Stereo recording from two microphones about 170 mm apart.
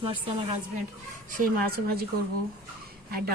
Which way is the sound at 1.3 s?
60° right (ahead or behind).